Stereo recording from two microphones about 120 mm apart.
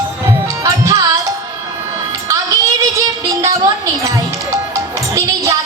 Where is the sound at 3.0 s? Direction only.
25° right (ahead or behind).